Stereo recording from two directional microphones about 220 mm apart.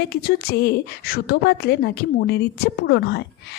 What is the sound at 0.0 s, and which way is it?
A woman's voice, 45° left (ahead or behind).